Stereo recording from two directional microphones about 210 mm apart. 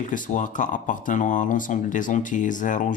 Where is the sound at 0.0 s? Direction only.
35° left (ahead or behind).